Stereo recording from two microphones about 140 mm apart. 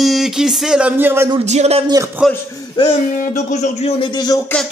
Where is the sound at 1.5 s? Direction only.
50° right (ahead or behind).